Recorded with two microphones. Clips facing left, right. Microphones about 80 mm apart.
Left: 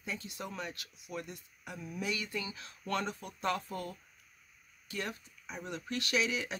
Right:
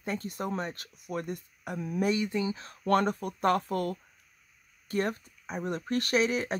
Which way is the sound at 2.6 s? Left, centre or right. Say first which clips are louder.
Right 11 dB; right.